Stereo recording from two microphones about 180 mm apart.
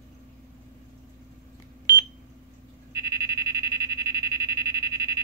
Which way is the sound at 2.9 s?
20° right (ahead or behind).